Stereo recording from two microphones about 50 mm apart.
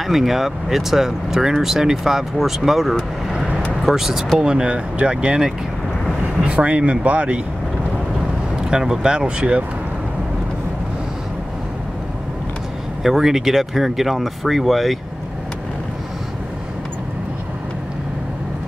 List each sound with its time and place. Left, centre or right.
0.0 s speech: centre; by 7.3 s right
8.6 s speech: centre
13.0 s speech: centre